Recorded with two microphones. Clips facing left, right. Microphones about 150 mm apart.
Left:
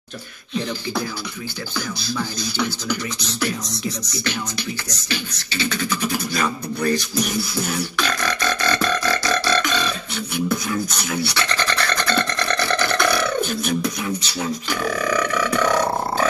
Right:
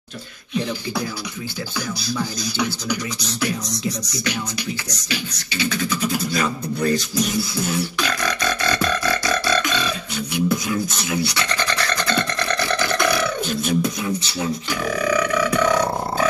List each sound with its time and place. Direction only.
2.5 s beatboxing: 15° right (ahead or behind)
6.8 s beatboxing: 25° right (ahead or behind)
8.7 s burping: 15° right (ahead or behind)
10.1 s speech: 15° right (ahead or behind)
13.5 s beatboxing: 25° right (ahead or behind)